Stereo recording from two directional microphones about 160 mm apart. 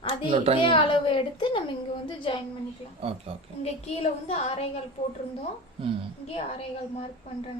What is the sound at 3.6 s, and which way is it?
A woman's voice, 40° left (ahead or behind).